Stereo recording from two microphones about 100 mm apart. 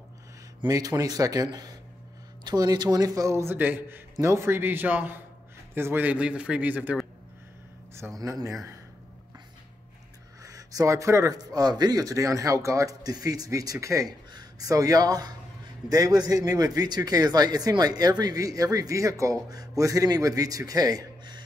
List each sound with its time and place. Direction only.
0.7 s speech: 40° right (ahead or behind)
3.5 s a man's voice: 20° right (ahead or behind)
8.2 s speech: 35° right (ahead or behind)
10.4 s speech: 35° right (ahead or behind)